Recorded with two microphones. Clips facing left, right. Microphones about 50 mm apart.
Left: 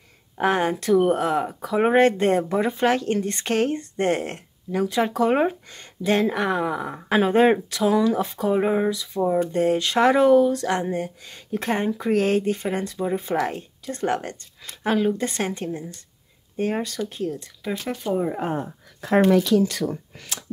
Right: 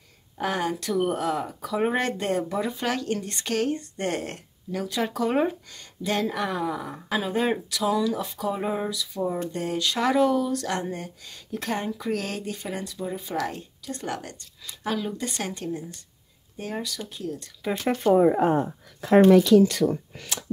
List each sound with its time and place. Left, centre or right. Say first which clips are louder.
0.4 s speech: left 6 dB; left
7.1 s speech: left 8 dB; left
17.6 s speech: even; centre
18.1 s speech: right 6 dB; right